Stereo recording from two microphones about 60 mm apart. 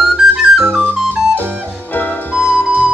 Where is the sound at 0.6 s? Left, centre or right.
Right.